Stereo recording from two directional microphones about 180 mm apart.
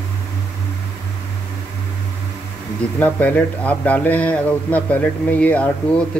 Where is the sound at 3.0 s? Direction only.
10° left (ahead or behind).